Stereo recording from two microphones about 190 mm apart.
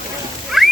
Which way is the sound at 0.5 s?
Centre (ahead or behind).